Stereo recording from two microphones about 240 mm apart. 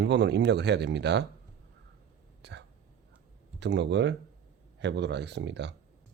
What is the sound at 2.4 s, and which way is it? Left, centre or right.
Speech, right.